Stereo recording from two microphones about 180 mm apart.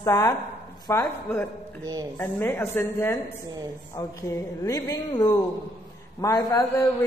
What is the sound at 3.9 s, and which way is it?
A man's voice, 20° left (ahead or behind).